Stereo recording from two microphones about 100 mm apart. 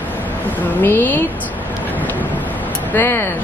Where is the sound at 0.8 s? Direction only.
20° left (ahead or behind).